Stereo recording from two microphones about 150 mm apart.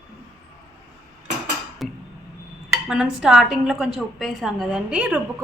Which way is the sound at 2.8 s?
5° right (ahead or behind).